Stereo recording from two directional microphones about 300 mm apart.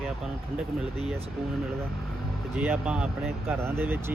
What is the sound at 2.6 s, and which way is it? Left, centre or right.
Speech, centre.